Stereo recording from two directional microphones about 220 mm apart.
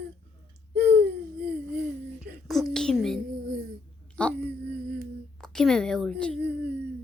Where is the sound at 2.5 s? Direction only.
Centre (ahead or behind).